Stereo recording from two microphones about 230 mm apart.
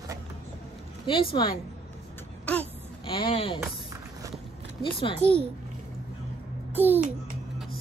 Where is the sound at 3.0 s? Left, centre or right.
Left.